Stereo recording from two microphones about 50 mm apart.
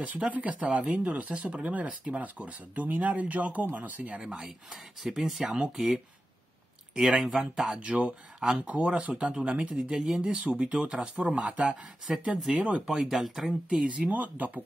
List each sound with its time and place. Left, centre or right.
0.0 s speech: right
4.2 s speech: centre
7.2 s speech: centre
7.8 s speech: right
8.4 s speech: centre
8.6 s speech: right
10.3 s speech: right
11.7 s speech: centre
13.8 s speech: right